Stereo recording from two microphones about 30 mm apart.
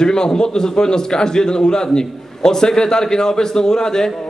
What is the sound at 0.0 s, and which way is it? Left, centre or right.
A man's voice, left.